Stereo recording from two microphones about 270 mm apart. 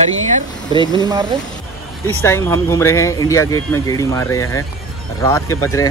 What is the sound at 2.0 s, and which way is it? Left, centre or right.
Speech, centre.